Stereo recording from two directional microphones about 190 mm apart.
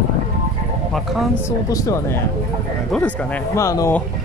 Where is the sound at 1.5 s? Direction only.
15° left (ahead or behind).